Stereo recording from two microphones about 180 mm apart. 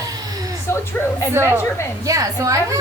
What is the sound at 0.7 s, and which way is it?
Speech, 15° left (ahead or behind).